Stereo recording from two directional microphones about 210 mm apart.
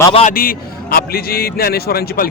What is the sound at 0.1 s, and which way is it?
Speech, 30° left (ahead or behind).